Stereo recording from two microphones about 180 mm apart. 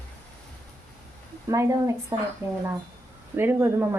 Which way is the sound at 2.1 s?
20° right (ahead or behind).